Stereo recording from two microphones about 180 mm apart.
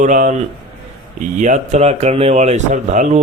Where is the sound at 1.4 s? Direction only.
40° right (ahead or behind).